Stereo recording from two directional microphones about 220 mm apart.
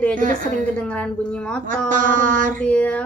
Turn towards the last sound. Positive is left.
turn(degrees=5)  # may be behind; listen again after turning